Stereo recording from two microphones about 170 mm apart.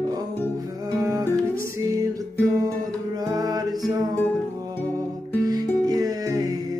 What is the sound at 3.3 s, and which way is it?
Music, 20° right (ahead or behind).